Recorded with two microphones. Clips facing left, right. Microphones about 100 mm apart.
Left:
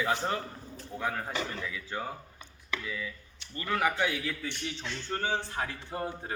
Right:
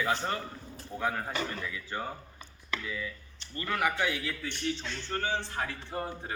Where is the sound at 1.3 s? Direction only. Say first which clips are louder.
Even; 20° left (ahead or behind).